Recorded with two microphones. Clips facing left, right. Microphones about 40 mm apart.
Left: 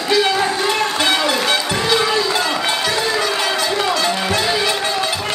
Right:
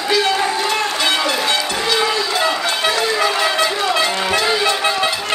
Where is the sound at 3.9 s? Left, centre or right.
Right.